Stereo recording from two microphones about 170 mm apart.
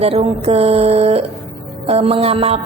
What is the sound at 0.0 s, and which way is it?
A woman's voice, 35° right (ahead or behind).